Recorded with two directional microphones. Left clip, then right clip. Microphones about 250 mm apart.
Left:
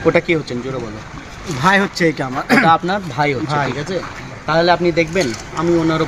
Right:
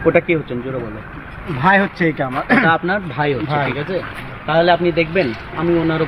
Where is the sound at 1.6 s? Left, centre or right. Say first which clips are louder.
Even; centre.